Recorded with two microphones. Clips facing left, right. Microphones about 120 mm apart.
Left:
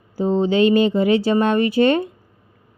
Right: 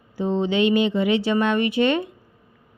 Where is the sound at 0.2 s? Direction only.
35° left (ahead or behind).